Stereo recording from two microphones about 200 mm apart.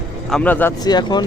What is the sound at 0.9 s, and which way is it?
Speech, 20° left (ahead or behind).